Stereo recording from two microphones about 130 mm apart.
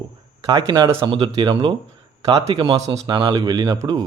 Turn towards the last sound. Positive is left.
turn(degrees=-30)  # may be behind; listen again after turning